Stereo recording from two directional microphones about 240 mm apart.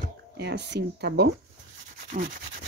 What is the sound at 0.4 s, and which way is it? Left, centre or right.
Speech, right.